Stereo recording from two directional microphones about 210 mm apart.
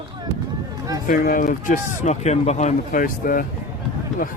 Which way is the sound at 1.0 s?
40° left (ahead or behind).